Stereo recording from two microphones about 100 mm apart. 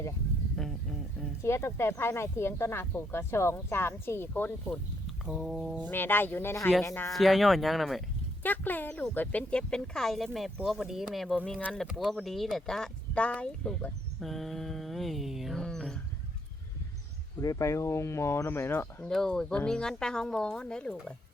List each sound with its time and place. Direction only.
0.5 s speech: centre (ahead or behind)
1.4 s speech: 30° left (ahead or behind)
5.2 s speech: centre (ahead or behind)
5.8 s speech: 20° left (ahead or behind)
7.1 s speech: centre (ahead or behind)
8.4 s speech: 20° left (ahead or behind); by 15.6 s centre (ahead or behind)
15.6 s a sound: 10° left (ahead or behind)
17.4 s speech: 35° left (ahead or behind)
19.0 s speech: 5° left (ahead or behind)